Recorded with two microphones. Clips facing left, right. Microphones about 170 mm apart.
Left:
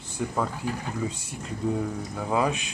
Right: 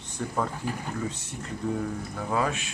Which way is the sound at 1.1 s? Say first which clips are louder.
Even; 10° left (ahead or behind).